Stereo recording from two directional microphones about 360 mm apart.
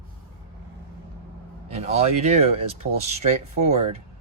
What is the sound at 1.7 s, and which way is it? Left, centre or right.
Speech, centre.